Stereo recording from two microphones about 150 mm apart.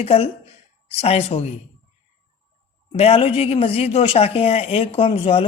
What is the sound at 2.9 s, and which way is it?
Speech, 40° left (ahead or behind).